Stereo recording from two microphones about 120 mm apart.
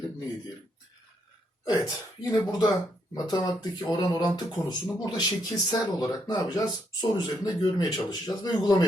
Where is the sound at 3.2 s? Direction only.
35° left (ahead or behind).